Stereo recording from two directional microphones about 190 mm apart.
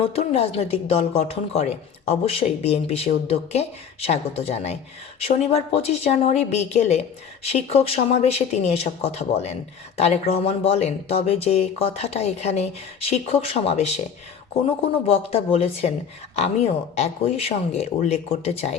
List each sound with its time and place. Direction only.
0.0 s a woman's voice: 30° left (ahead or behind)
15.0 s a woman's voice: 30° left (ahead or behind)